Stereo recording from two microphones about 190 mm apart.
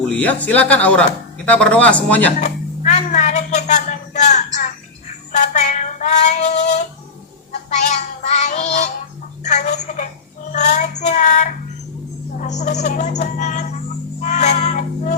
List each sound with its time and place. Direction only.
0.1 s speech: 10° left (ahead or behind)
2.4 s a sound: 40° left (ahead or behind)
5.3 s female singing: 40° left (ahead or behind)
7.7 s music: 35° left (ahead or behind)
9.4 s speech: 35° left (ahead or behind)
10.5 s child singing: 40° left (ahead or behind)
12.4 s speech: 40° left (ahead or behind)
14.2 s cat: 35° left (ahead or behind)